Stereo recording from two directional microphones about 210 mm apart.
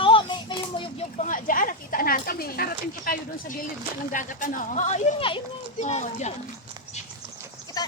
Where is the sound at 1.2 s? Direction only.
40° left (ahead or behind).